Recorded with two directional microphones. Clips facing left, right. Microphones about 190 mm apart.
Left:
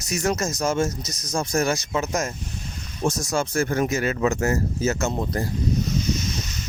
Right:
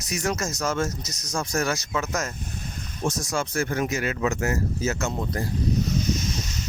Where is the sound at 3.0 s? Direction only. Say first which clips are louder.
Left 3 dB; 45° left (ahead or behind).